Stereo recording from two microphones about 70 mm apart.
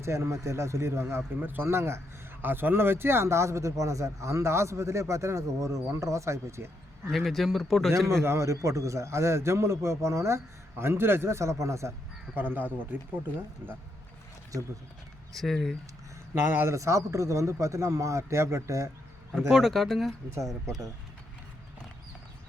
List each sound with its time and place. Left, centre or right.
0.0 s a man's voice: right
7.1 s a man's voice: centre
7.9 s a man's voice: right
12.4 s speech: right
15.4 s a man's voice: centre
16.3 s speech: right
16.7 s a man's voice: right
19.4 s a man's voice: centre